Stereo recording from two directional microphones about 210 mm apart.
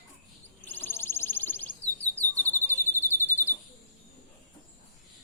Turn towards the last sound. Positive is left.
turn(degrees=10)  # may be behind; listen again after turning